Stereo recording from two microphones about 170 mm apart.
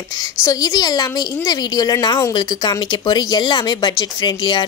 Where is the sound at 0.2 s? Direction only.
20° left (ahead or behind).